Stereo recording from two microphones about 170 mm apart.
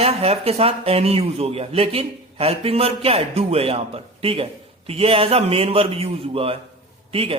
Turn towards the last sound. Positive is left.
turn(degrees=-35)  # may be behind; listen again after turning